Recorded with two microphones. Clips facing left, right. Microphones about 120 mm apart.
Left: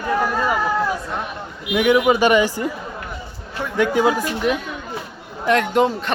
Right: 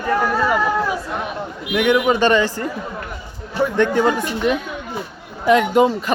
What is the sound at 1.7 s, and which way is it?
Speech, 10° left (ahead or behind).